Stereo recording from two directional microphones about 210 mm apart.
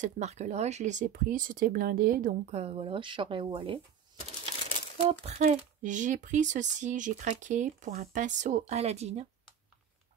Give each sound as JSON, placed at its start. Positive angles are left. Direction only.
{"t": 0.0, "sound": "speech", "side_deg": -30}
{"t": 2.5, "sound": "speech", "side_deg": -25}
{"t": 5.2, "sound": "speech", "side_deg": -35}